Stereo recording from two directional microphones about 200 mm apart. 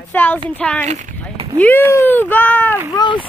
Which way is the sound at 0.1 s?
10° left (ahead or behind).